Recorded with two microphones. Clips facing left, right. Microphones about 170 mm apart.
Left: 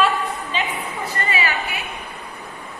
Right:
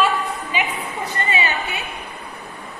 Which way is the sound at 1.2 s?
20° right (ahead or behind).